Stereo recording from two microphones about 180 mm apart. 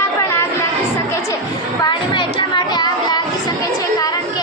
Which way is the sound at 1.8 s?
25° left (ahead or behind).